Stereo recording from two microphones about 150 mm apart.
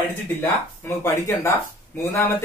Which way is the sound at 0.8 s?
15° left (ahead or behind).